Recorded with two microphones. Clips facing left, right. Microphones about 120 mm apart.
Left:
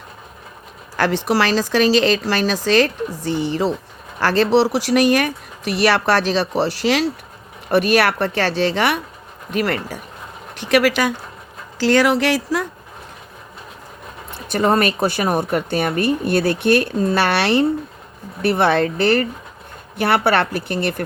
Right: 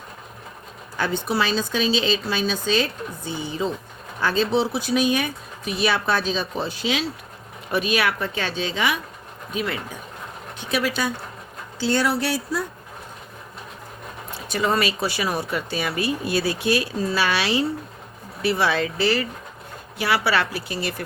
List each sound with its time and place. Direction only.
0.9 s speech: 90° left; by 10.0 s 65° left (ahead or behind)
10.6 s speech: 80° left
14.3 s a woman's voice: 55° left (ahead or behind)